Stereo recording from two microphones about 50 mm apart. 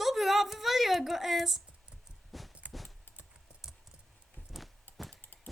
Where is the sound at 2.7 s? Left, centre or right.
Centre.